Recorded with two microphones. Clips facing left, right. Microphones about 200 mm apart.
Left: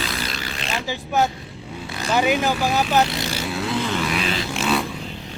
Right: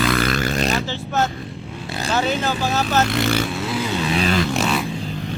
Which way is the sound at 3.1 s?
55° right (ahead or behind).